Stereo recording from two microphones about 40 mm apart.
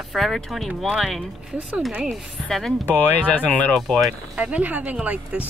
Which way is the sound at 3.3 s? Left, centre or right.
Left.